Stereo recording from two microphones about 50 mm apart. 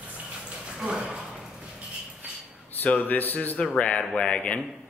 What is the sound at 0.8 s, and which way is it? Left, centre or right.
Speech, centre.